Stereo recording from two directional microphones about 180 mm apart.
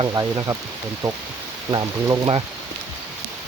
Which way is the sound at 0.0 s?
15° right (ahead or behind).